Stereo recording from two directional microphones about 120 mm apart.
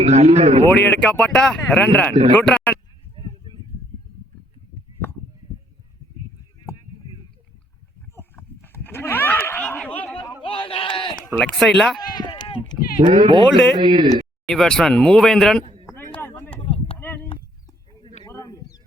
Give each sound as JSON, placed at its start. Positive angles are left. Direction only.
{"t": 0.0, "sound": "speech", "side_deg": -60}
{"t": 0.7, "sound": "speech", "side_deg": 10}
{"t": 3.2, "sound": "a sound", "side_deg": -40}
{"t": 8.1, "sound": "livestock", "side_deg": 20}
{"t": 10.4, "sound": "speech", "side_deg": 50}
{"t": 11.3, "sound": "speech", "side_deg": 5}
{"t": 11.9, "sound": "bleat", "side_deg": 35}
{"t": 13.2, "sound": "speech", "side_deg": -45}
{"t": 13.5, "sound": "speech", "side_deg": 5}
{"t": 13.7, "sound": "speech", "side_deg": -45}
{"t": 14.4, "sound": "speech", "side_deg": 5}
{"t": 15.9, "sound": "a sound", "side_deg": 20}
{"t": 16.6, "sound": "a sound", "side_deg": 50}
{"t": 18.3, "sound": "bird", "side_deg": 30}